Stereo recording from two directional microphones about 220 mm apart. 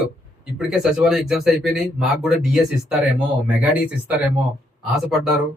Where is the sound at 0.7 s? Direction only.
Centre (ahead or behind).